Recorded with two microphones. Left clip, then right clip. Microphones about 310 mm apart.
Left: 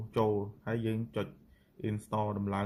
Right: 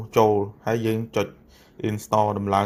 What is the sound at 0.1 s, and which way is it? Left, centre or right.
Speech, centre.